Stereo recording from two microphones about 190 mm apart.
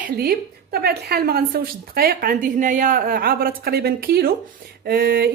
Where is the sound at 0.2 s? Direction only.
55° right (ahead or behind).